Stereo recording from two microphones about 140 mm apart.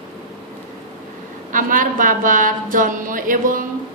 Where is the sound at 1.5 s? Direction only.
75° right (ahead or behind).